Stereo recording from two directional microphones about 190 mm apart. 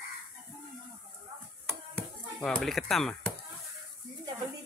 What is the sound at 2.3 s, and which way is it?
Speech, centre (ahead or behind).